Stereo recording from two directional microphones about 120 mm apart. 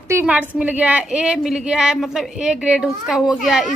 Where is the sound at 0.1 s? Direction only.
15° right (ahead or behind).